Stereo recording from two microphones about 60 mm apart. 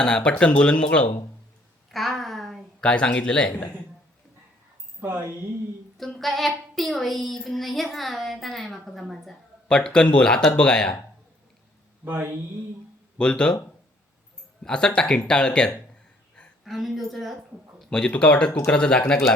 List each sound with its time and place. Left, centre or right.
0.0 s speech: centre
1.9 s a sound: centre
2.8 s speech: centre
6.0 s a woman's voice: centre
9.6 s speech: centre
12.0 s mantra: right
13.1 s speech: centre
14.6 s speech: centre
16.6 s a woman's voice: centre
17.7 s a sound: centre
18.1 s speech: centre